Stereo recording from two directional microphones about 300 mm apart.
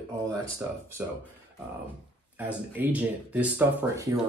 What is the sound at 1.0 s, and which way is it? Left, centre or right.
Speech, centre.